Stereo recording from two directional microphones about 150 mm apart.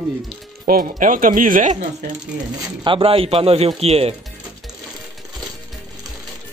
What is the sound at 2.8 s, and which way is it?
A man's voice, 35° right (ahead or behind).